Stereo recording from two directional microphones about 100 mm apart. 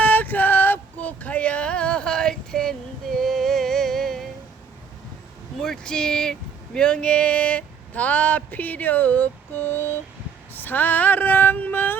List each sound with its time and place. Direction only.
0.0 s music: 15° left (ahead or behind)
5.5 s a sound: 5° left (ahead or behind); by 9.9 s 20° left (ahead or behind)
10.5 s speech: 20° left (ahead or behind)